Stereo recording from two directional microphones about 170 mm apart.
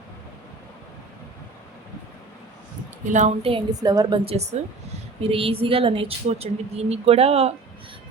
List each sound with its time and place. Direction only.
3.1 s a woman's voice: 45° right (ahead or behind)
3.7 s a woman's voice: 20° right (ahead or behind)
4.3 s a woman's voice: 40° right (ahead or behind)